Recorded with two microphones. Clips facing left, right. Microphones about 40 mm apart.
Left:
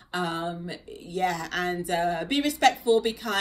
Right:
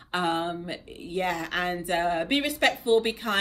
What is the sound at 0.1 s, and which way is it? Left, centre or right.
A man's voice, right.